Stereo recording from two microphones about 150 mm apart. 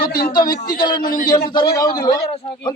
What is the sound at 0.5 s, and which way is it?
Speech, 75° left (ahead or behind).